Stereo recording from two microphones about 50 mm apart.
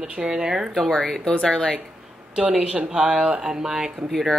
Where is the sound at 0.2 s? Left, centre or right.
Centre.